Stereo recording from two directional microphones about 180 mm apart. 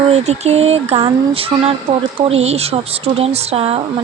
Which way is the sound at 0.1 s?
40° right (ahead or behind).